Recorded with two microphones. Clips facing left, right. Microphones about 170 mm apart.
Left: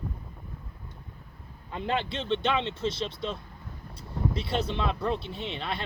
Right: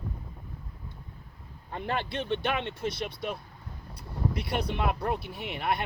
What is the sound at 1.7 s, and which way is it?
Speech, 20° left (ahead or behind).